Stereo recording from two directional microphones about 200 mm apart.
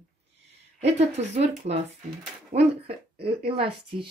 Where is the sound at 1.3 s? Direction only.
30° right (ahead or behind).